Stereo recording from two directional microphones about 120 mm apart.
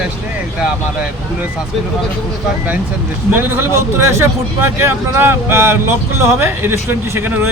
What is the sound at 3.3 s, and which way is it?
Speech, 15° right (ahead or behind).